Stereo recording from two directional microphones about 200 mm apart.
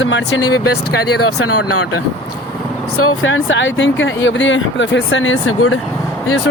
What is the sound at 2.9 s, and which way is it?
Speech, 80° left.